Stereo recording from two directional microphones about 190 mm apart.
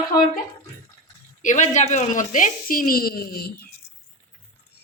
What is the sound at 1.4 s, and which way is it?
Speech, 40° left (ahead or behind).